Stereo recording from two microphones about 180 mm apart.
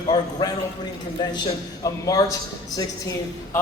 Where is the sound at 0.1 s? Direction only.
20° left (ahead or behind).